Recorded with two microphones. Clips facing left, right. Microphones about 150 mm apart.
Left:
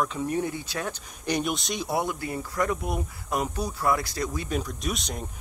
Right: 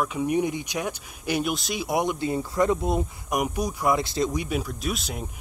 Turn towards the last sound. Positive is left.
turn(degrees=-5)  # may be behind; listen again after turning